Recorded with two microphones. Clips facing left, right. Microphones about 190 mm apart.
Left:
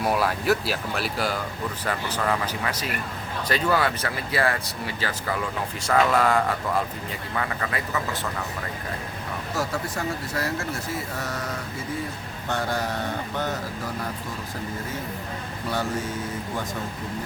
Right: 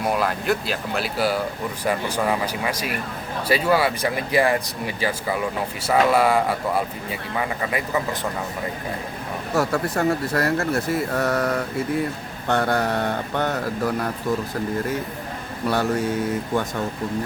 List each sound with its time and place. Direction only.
0.0 s speech: 5° left (ahead or behind); by 8.0 s 15° right (ahead or behind)
9.6 s speech: 60° right (ahead or behind)